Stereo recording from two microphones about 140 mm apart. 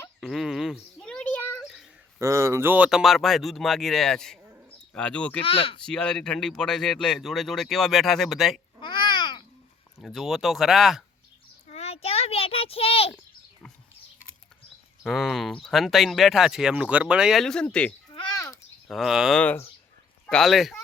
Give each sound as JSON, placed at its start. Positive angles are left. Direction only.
{"t": 0.2, "sound": "a sound", "side_deg": 0}
{"t": 2.1, "sound": "speech", "side_deg": -20}
{"t": 5.4, "sound": "speech", "side_deg": 40}
{"t": 5.8, "sound": "speech", "side_deg": 5}
{"t": 8.8, "sound": "babbling", "side_deg": 35}
{"t": 10.0, "sound": "speech", "side_deg": 0}
{"t": 11.7, "sound": "a sound", "side_deg": 45}
{"t": 15.0, "sound": "speech", "side_deg": 0}
{"t": 18.3, "sound": "a sound", "side_deg": 25}
{"t": 18.9, "sound": "speech", "side_deg": 0}
{"t": 19.4, "sound": "speech", "side_deg": 10}